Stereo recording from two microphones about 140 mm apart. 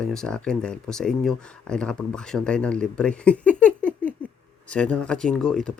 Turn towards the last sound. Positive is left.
turn(degrees=5)  # may be behind; listen again after turning